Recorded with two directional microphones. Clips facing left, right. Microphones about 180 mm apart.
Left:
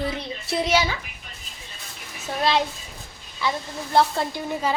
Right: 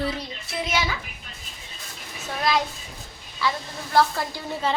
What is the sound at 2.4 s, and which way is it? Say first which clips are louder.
Speech: left 2 dB; 25° left (ahead or behind).